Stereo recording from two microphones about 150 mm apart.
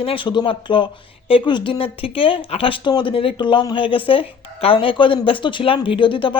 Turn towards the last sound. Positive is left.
turn(degrees=35)  # may be behind; listen again after turning